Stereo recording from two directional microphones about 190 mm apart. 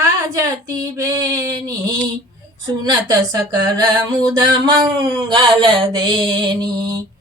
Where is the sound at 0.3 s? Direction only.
20° right (ahead or behind).